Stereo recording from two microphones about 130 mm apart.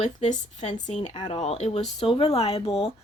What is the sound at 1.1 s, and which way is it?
Speech, 35° left (ahead or behind).